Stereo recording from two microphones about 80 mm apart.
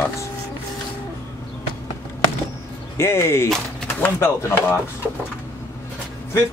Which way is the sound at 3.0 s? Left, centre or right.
Left.